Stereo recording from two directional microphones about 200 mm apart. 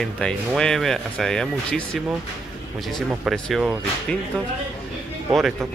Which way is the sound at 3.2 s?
Centre (ahead or behind).